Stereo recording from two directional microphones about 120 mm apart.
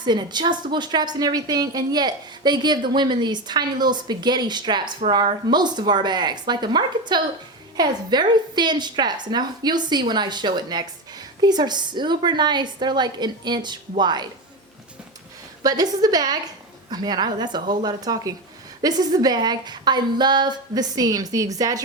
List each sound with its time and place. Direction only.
0.0 s a woman's voice: 35° right (ahead or behind)
15.6 s a woman's voice: 35° right (ahead or behind)